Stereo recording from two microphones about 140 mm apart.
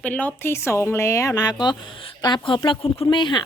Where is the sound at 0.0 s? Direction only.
10° left (ahead or behind).